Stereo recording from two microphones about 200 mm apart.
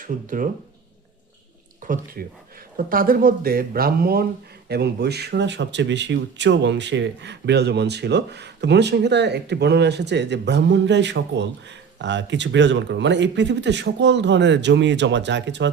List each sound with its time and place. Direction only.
0.0 s speech: 40° right (ahead or behind)
1.8 s speech: 40° right (ahead or behind); by 15.7 s 60° right (ahead or behind)